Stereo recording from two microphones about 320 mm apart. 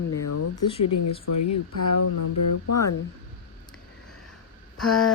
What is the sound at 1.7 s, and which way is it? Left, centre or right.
Speech, left.